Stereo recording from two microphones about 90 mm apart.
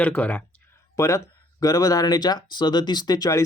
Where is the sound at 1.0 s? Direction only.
35° left (ahead or behind).